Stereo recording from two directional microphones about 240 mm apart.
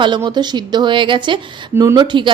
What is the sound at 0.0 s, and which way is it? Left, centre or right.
Speech, centre.